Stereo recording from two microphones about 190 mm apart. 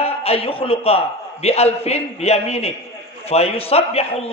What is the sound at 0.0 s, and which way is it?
A man's voice, 30° left (ahead or behind).